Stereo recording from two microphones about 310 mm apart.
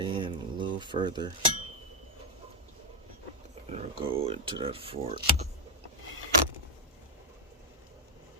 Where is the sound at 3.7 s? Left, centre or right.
Right.